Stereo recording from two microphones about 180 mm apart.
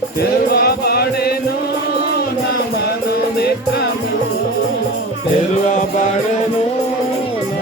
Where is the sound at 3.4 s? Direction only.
65° left (ahead or behind).